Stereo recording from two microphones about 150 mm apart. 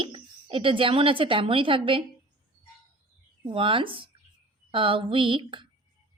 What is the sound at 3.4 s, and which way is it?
A woman's voice, 35° right (ahead or behind).